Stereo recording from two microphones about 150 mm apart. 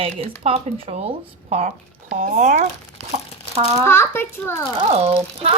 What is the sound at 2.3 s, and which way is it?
Speech, 55° right (ahead or behind).